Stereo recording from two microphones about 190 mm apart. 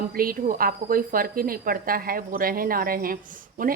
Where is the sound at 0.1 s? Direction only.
50° right (ahead or behind).